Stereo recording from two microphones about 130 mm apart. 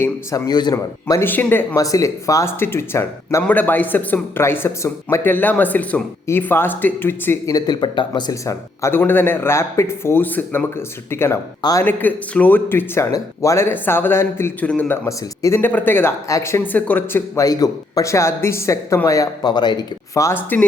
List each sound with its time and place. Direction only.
0.0 s speech: 25° left (ahead or behind)
1.2 s speech: 15° left (ahead or behind)
7.5 s speech: 35° left (ahead or behind)
8.4 s speech: 20° left (ahead or behind)